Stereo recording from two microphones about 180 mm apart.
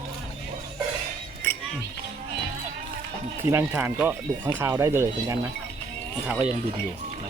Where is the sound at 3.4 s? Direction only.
10° right (ahead or behind).